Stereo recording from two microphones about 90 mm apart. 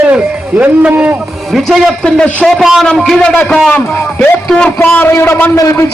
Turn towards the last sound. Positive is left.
turn(degrees=35)  # may be behind; listen again after turning